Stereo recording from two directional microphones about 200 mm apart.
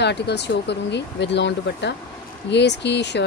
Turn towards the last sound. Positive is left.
turn(degrees=60)  # may be behind; listen again after turning